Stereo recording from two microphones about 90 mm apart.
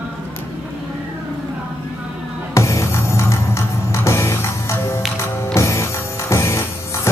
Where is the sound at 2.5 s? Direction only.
35° left (ahead or behind).